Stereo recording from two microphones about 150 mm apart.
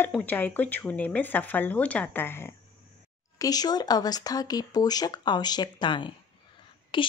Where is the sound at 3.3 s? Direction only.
25° left (ahead or behind).